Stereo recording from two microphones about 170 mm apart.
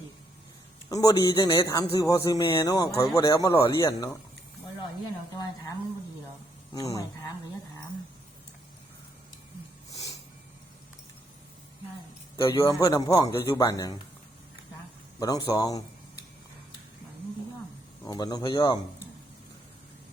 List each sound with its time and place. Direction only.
0.9 s a man's voice: 20° left (ahead or behind)
6.7 s a man's voice: 20° left (ahead or behind)
12.4 s a man's voice: 20° left (ahead or behind)
15.2 s a man's voice: 20° left (ahead or behind)
18.0 s a man's voice: 20° left (ahead or behind)